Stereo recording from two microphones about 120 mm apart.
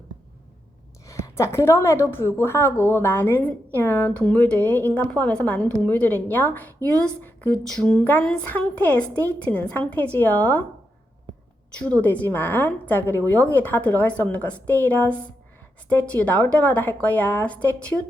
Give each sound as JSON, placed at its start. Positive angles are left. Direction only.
{"t": 1.0, "sound": "a woman's voice", "side_deg": 25}
{"t": 11.8, "sound": "a woman's voice", "side_deg": 10}